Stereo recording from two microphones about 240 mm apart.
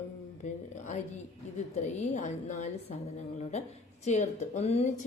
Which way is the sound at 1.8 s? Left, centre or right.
Left.